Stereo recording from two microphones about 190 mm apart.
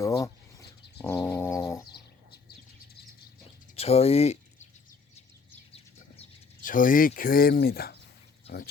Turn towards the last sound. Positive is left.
turn(degrees=55)  # may be behind; listen again after turning